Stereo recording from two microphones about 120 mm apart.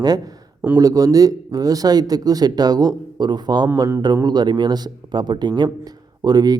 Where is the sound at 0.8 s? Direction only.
30° right (ahead or behind).